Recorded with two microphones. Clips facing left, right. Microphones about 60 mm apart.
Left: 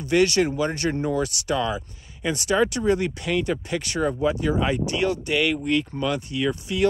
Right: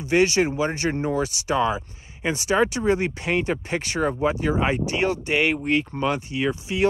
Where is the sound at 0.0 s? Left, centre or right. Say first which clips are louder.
Even; right.